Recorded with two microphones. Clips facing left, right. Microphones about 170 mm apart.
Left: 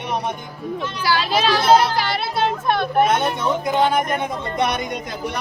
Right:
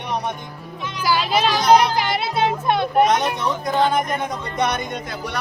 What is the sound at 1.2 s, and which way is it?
A child's voice, 10° right (ahead or behind).